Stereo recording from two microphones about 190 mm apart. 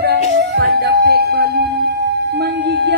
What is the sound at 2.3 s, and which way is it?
Music, 65° right (ahead or behind).